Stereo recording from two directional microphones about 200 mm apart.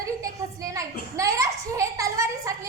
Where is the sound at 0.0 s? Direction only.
15° right (ahead or behind).